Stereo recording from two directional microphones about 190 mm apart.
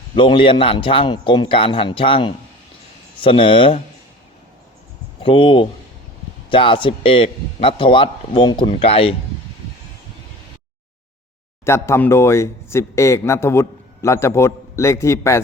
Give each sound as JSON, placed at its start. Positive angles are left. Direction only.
{"t": 0.2, "sound": "speech", "side_deg": 25}
{"t": 5.2, "sound": "speech", "side_deg": 25}
{"t": 11.6, "sound": "speech", "side_deg": 15}